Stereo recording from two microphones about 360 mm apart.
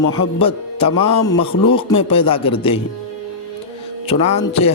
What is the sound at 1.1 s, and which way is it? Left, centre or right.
Speech, left.